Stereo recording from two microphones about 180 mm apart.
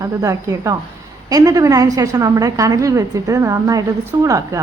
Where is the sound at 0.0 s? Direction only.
15° right (ahead or behind).